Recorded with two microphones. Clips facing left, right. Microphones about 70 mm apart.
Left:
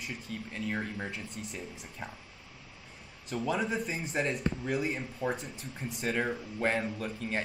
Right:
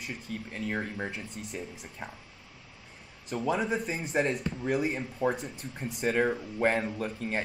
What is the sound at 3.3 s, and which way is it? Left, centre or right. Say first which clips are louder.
Speech: right 2 dB; centre.